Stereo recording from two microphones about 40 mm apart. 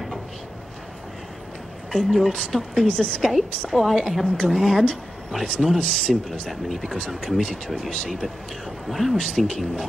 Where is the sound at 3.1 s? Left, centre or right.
Centre.